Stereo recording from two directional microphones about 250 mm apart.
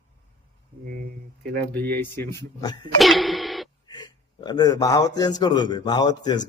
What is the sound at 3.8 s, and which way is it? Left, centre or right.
Speech, centre.